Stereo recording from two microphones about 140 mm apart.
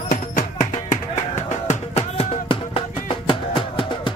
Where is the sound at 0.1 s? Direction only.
60° left (ahead or behind).